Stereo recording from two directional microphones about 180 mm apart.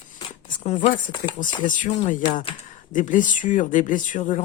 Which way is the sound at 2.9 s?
45° left (ahead or behind).